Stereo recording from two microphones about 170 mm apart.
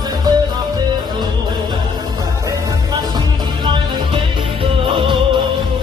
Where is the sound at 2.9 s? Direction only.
25° right (ahead or behind).